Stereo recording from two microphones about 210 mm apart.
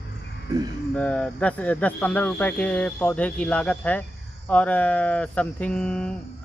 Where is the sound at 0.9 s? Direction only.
5° left (ahead or behind).